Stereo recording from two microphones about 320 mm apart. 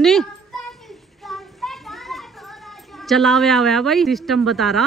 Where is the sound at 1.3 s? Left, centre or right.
Centre.